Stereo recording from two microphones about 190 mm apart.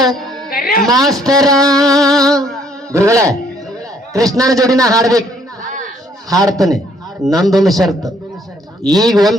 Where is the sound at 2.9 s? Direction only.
15° right (ahead or behind).